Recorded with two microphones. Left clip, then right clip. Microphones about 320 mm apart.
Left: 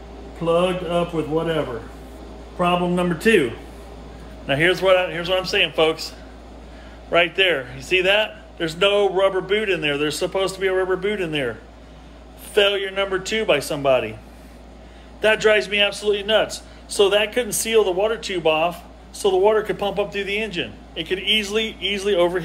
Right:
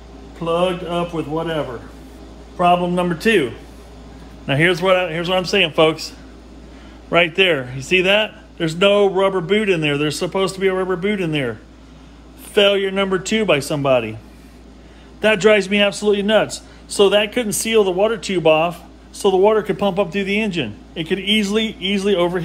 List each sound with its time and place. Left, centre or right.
0.5 s a man's voice: centre
4.5 s a man's voice: centre
12.5 s a man's voice: centre
15.1 s a man's voice: centre